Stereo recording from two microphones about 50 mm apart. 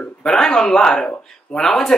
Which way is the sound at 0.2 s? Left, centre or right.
Centre.